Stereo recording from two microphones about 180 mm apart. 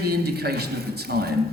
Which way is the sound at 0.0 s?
60° right (ahead or behind).